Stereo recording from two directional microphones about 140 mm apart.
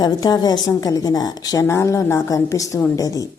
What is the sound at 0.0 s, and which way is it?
A woman's voice, 30° left (ahead or behind).